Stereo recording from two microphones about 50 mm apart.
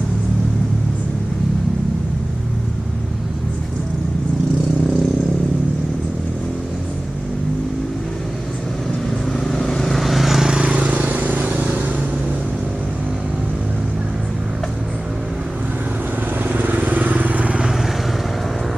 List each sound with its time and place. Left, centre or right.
9.4 s vehicle: centre
10.6 s vehicle: right
16.4 s vehicle: right